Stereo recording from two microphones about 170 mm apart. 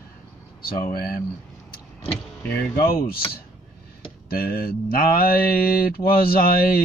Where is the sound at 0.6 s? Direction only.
60° left (ahead or behind).